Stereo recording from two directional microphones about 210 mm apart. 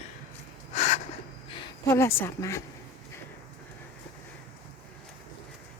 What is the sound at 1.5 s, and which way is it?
A woman's voice, 15° left (ahead or behind).